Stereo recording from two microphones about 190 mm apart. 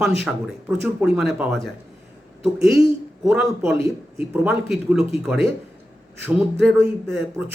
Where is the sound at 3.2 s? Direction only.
Centre (ahead or behind).